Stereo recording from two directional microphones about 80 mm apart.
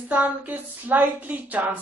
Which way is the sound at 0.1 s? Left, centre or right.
Centre.